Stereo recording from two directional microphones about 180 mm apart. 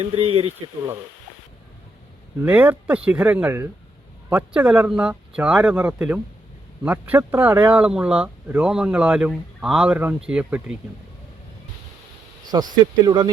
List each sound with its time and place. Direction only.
0.0 s speech: 30° right (ahead or behind)
2.4 s speech: 10° right (ahead or behind)
12.5 s speech: 20° right (ahead or behind)